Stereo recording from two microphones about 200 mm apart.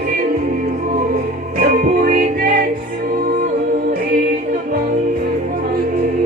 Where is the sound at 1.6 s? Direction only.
45° right (ahead or behind).